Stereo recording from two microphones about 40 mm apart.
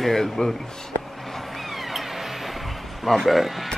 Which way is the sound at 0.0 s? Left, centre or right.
Centre.